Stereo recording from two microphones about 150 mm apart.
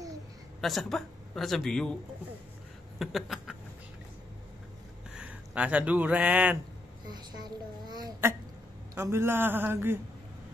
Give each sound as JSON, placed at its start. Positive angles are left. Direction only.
{"t": 0.6, "sound": "a man's voice", "side_deg": 0}
{"t": 3.0, "sound": "a sound", "side_deg": 0}
{"t": 5.1, "sound": "speech", "side_deg": -5}
{"t": 7.1, "sound": "a child's voice", "side_deg": -30}
{"t": 8.9, "sound": "a man's voice", "side_deg": -15}